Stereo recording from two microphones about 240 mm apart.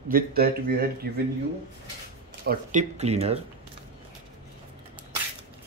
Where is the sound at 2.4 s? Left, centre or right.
Right.